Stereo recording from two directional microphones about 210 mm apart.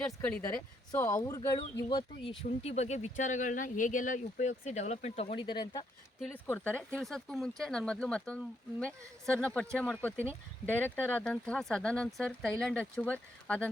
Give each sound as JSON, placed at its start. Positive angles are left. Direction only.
{"t": 0.0, "sound": "speech", "side_deg": 15}
{"t": 6.1, "sound": "speech", "side_deg": 0}